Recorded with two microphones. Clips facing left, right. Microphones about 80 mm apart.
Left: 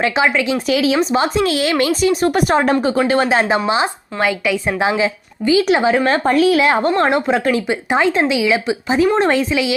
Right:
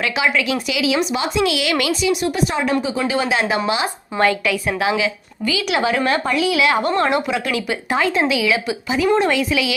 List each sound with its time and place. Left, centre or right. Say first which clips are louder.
0.0 s speech: left 4 dB; left
2.8 s speech: left 5 dB; left
3.2 s speech: left 4 dB; left
4.2 s a woman's voice: even; centre
4.8 s speech: left 3 dB; left